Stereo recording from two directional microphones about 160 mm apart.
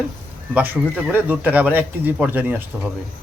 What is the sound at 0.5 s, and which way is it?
Speech, 10° right (ahead or behind).